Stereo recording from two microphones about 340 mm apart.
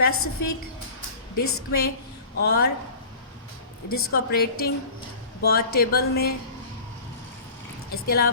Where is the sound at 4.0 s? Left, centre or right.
Left.